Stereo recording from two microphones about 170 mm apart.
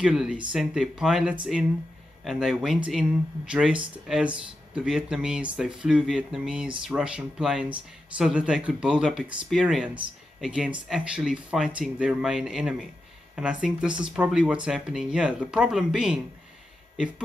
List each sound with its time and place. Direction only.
0.0 s speech: 5° right (ahead or behind)